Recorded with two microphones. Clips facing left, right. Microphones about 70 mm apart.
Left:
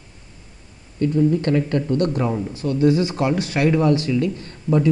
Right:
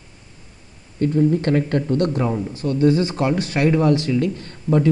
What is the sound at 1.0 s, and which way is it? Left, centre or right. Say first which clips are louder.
Speech: even; right.